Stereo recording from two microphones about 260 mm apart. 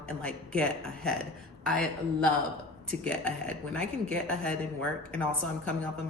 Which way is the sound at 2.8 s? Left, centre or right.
Centre.